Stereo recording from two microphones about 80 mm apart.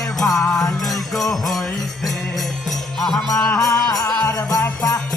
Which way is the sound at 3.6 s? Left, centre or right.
Left.